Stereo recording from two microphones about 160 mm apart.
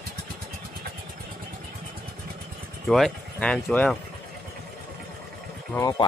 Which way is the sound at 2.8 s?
Centre (ahead or behind).